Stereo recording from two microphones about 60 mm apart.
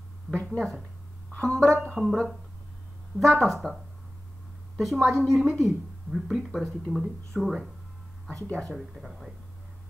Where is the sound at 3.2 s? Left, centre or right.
Centre.